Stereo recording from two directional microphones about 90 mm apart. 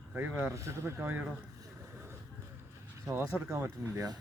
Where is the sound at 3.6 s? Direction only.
40° right (ahead or behind).